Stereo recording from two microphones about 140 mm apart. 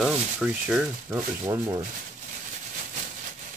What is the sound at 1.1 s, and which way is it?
Speech, 15° right (ahead or behind).